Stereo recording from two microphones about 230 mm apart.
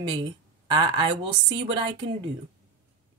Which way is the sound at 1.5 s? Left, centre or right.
Right.